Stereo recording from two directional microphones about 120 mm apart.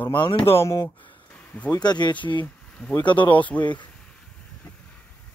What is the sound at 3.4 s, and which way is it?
Speech, 10° left (ahead or behind).